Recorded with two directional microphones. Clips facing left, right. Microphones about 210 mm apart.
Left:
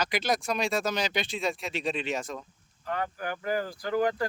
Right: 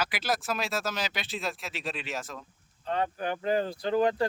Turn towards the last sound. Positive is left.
turn(degrees=-25)  # may be behind; listen again after turning